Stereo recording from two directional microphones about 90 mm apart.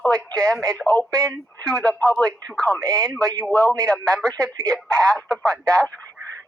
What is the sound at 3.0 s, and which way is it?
Speech, 10° left (ahead or behind).